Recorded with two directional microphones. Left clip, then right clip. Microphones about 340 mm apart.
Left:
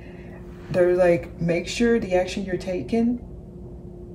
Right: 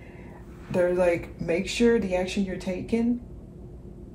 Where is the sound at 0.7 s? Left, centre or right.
Centre.